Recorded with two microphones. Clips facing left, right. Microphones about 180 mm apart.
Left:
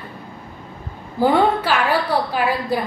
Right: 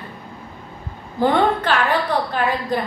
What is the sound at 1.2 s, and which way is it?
A woman's voice, 10° left (ahead or behind).